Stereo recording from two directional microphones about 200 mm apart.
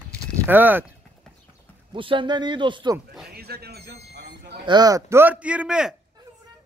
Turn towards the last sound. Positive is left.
turn(degrees=-5)  # may be behind; listen again after turning